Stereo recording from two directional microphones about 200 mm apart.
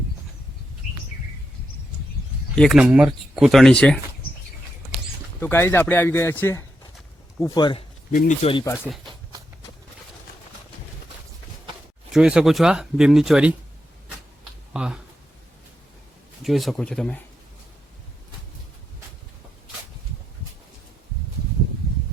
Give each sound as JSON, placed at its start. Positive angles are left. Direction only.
{"t": 2.6, "sound": "speech", "side_deg": 0}
{"t": 5.4, "sound": "speech", "side_deg": 10}
{"t": 8.1, "sound": "speech", "side_deg": 45}
{"t": 8.4, "sound": "speech", "side_deg": 30}
{"t": 8.6, "sound": "speech", "side_deg": 10}
{"t": 12.1, "sound": "speech", "side_deg": -5}
{"t": 14.7, "sound": "speech", "side_deg": -5}
{"t": 16.4, "sound": "speech", "side_deg": 0}